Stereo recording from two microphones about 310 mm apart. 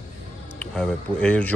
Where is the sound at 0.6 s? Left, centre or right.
Centre.